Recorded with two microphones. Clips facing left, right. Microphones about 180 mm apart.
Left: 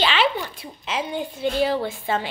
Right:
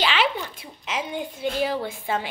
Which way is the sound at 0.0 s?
10° right (ahead or behind).